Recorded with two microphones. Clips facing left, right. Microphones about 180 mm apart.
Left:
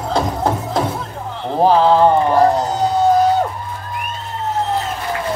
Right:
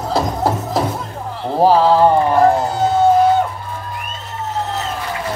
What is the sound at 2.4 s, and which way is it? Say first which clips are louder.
Music: right 1 dB; 40° left (ahead or behind).